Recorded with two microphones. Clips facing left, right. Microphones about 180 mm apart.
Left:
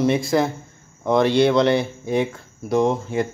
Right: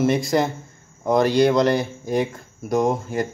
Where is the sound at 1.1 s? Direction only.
40° right (ahead or behind).